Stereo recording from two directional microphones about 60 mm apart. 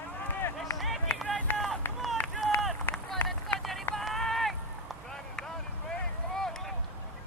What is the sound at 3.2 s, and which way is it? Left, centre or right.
Run, left.